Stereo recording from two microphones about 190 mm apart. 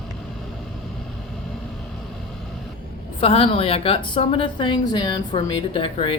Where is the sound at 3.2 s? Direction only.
30° left (ahead or behind).